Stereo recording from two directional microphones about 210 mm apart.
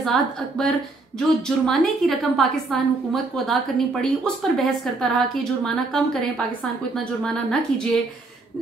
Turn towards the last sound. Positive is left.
turn(degrees=5)  # may be behind; listen again after turning